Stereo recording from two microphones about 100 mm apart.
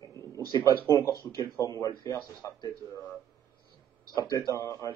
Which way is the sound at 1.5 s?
35° left (ahead or behind).